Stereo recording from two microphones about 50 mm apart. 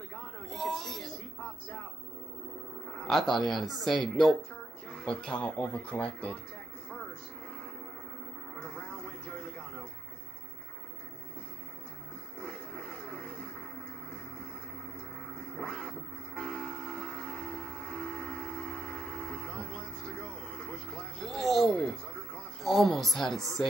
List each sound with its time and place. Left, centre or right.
0.1 s a sound: centre
2.9 s speech: centre
4.8 s speech: centre
8.5 s radio: centre
12.4 s a sound: centre
15.5 s vehicle: centre
16.3 s train: centre
17.0 s vehicle: centre
17.5 s train: centre
19.6 s vehicle: left
20.9 s a sound: centre
22.6 s a woman's voice: centre